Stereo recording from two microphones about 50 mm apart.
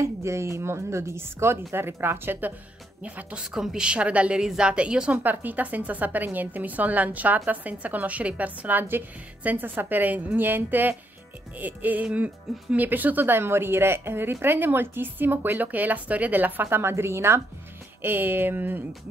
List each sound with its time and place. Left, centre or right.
0.0 s a woman's voice: right
3.0 s a woman's voice: right
3.5 s a woman's voice: centre
3.8 s a woman's voice: right
4.4 s a woman's voice: centre
5.2 s a woman's voice: right
16.9 s a woman's voice: right
18.0 s a woman's voice: right